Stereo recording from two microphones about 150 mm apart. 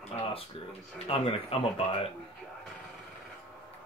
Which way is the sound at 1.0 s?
35° left (ahead or behind).